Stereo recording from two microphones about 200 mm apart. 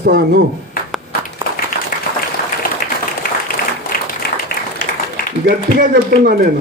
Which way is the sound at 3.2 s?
50° left (ahead or behind).